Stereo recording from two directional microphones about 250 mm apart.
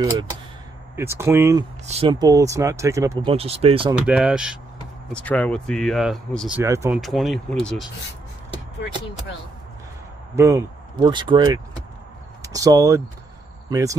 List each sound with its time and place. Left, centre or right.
0.9 s speech: centre
1.9 s speech: right
3.9 s speech: centre
7.0 s speech: centre
10.3 s speech: centre